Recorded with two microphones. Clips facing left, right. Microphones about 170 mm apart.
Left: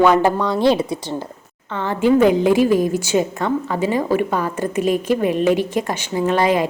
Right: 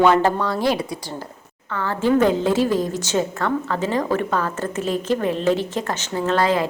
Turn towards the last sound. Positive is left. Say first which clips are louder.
# left 3 dB
turn(degrees=15)  # may be behind; listen again after turning